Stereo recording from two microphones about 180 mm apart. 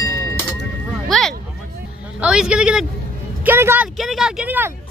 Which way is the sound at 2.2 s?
5° right (ahead or behind).